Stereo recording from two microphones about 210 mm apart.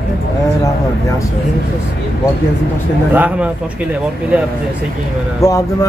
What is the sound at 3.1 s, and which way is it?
Speech, 10° right (ahead or behind).